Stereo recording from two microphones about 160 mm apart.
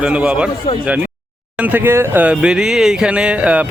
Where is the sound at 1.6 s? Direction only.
10° right (ahead or behind).